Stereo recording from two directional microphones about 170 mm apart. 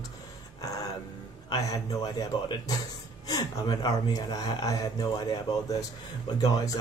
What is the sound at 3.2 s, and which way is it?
Speech, 25° left (ahead or behind).